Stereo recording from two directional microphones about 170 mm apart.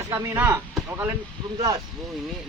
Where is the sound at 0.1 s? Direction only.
15° right (ahead or behind).